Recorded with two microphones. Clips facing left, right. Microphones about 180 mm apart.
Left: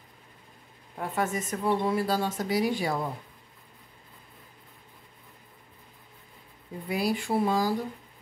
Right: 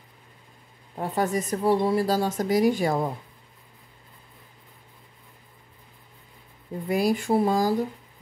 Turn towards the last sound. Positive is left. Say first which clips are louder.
# right 4 dB
turn(degrees=-40)  # may be behind; listen again after turning